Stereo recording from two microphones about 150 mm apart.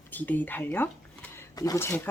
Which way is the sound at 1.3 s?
20° left (ahead or behind).